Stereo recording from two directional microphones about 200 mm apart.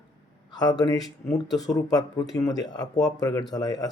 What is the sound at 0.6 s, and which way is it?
Speech, 20° left (ahead or behind).